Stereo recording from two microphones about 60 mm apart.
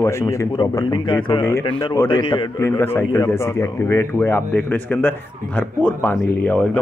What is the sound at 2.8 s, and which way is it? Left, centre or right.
Speech, left.